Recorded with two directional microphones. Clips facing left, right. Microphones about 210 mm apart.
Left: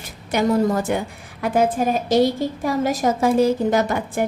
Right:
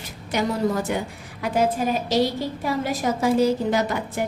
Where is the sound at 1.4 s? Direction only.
50° left (ahead or behind).